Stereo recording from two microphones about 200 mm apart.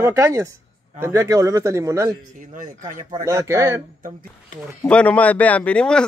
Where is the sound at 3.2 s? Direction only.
15° right (ahead or behind).